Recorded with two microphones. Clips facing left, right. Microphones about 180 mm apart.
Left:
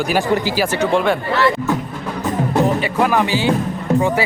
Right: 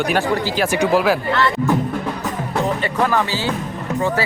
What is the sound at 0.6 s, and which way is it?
Speech, 10° right (ahead or behind).